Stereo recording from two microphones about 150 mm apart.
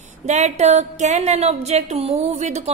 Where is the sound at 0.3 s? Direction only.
50° right (ahead or behind).